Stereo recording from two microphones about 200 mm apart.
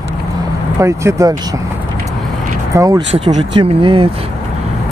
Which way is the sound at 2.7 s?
15° right (ahead or behind).